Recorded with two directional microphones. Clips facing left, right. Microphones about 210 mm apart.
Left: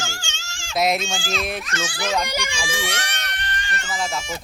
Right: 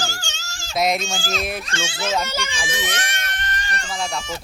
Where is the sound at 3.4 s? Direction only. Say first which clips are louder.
Even; 40° right (ahead or behind).